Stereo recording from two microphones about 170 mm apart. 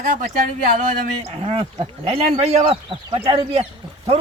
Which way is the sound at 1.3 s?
35° right (ahead or behind).